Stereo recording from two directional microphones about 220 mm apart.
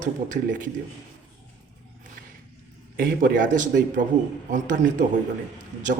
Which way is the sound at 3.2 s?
40° right (ahead or behind).